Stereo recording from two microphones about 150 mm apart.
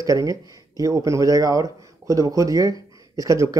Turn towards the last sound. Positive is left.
turn(degrees=-20)  # may be behind; listen again after turning